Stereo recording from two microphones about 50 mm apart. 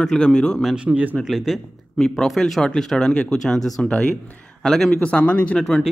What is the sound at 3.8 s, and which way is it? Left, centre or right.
Speech, left.